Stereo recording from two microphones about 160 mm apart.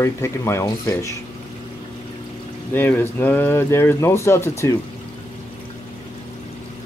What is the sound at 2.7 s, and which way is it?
Speech, 10° left (ahead or behind).